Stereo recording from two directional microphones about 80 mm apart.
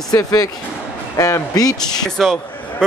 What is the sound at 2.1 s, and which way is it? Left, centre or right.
Speech, centre.